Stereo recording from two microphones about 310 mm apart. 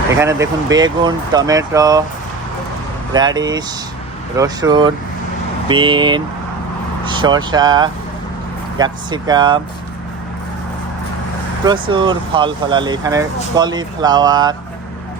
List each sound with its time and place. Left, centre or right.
0.2 s speech: centre
3.1 s speech: centre
11.6 s speech: centre